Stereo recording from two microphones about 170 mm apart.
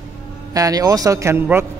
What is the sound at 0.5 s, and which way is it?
A man's voice, 20° right (ahead or behind).